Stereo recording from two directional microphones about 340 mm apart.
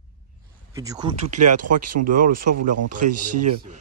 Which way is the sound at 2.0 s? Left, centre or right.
Right.